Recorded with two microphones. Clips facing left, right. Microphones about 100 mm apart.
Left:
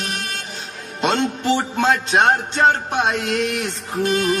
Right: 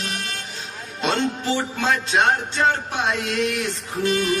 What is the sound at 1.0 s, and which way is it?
Music, 20° left (ahead or behind).